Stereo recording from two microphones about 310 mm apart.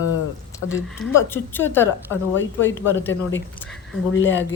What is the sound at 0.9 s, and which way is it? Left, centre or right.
Speech, centre.